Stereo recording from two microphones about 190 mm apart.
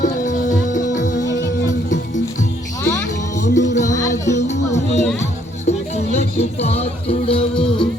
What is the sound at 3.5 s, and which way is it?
Music, 40° left (ahead or behind).